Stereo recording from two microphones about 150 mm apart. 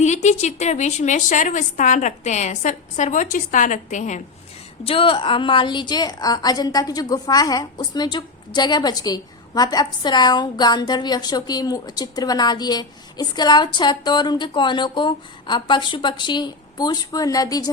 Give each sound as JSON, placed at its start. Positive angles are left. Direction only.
{"t": 0.0, "sound": "a woman's voice", "side_deg": 50}
{"t": 4.9, "sound": "a woman's voice", "side_deg": 35}